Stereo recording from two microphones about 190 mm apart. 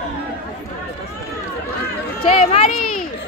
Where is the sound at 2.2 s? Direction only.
35° left (ahead or behind).